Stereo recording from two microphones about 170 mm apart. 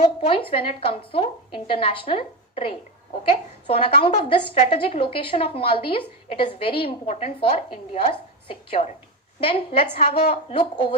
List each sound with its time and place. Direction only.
0.5 s a woman's voice: 35° left (ahead or behind)
10.0 s a woman's voice: 60° left (ahead or behind)
10.5 s a woman's voice: 30° left (ahead or behind)